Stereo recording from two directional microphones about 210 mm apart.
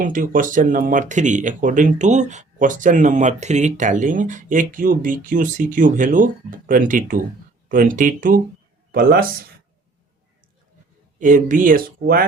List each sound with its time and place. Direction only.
0.0 s speech: 40° right (ahead or behind)
11.2 s speech: 40° right (ahead or behind)